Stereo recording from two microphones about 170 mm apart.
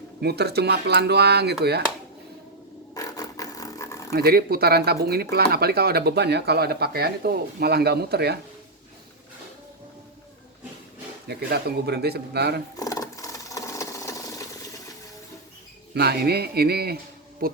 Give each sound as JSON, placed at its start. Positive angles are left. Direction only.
{"t": 0.2, "sound": "speech", "side_deg": -75}
{"t": 2.9, "sound": "a sound", "side_deg": 20}
{"t": 4.1, "sound": "speech", "side_deg": -65}
{"t": 11.3, "sound": "speech", "side_deg": -75}
{"t": 12.7, "sound": "sewing machine", "side_deg": 20}
{"t": 16.0, "sound": "speech", "side_deg": -70}